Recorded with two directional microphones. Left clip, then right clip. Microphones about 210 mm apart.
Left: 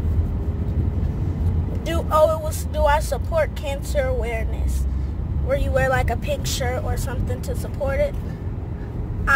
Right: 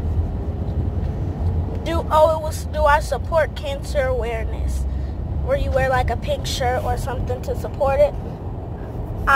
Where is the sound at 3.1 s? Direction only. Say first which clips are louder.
Right 3 dB; 15° left (ahead or behind).